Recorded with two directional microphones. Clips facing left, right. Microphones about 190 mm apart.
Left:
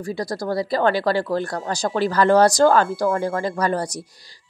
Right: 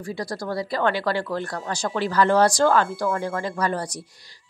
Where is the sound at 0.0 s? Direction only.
40° left (ahead or behind).